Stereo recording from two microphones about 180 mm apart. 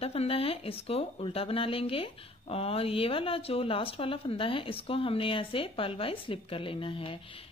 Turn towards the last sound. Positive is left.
turn(degrees=30)  # may be behind; listen again after turning